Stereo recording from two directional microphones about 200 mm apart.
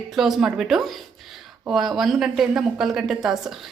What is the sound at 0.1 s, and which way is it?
A woman's voice, centre (ahead or behind).